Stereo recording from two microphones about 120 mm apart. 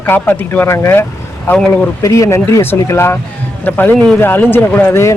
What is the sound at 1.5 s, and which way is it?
Speech, 5° left (ahead or behind).